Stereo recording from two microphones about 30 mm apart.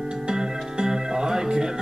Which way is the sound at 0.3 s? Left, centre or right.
Right.